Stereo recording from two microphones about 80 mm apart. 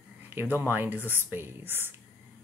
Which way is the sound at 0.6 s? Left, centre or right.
Right.